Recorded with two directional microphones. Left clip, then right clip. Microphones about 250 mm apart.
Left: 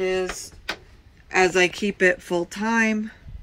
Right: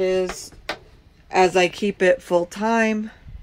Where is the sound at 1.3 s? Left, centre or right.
Centre.